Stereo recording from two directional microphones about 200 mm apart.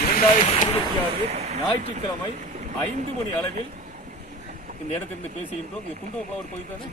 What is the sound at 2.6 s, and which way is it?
Speech, 35° right (ahead or behind).